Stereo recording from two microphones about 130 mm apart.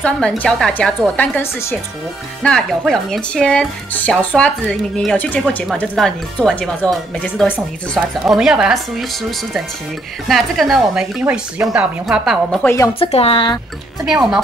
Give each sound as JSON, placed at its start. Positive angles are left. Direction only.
{"t": 0.0, "sound": "speech", "side_deg": 10}
{"t": 2.4, "sound": "speech", "side_deg": 5}
{"t": 10.2, "sound": "speech", "side_deg": 0}
{"t": 12.6, "sound": "speech", "side_deg": 25}
{"t": 13.0, "sound": "speech", "side_deg": 45}
{"t": 14.0, "sound": "speech", "side_deg": -5}